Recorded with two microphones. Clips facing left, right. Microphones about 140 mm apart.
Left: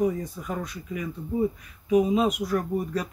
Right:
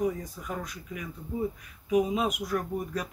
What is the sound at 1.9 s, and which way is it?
Speech, 5° right (ahead or behind).